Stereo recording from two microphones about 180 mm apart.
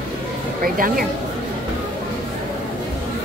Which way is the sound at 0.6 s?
55° right (ahead or behind).